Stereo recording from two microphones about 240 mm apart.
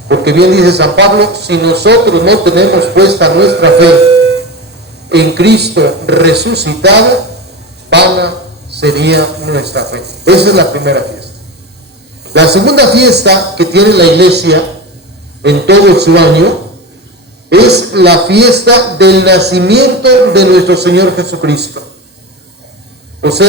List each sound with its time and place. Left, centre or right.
0.1 s a man's voice: right
7.9 s a sound: right
8.7 s a man's voice: right
23.2 s a man's voice: right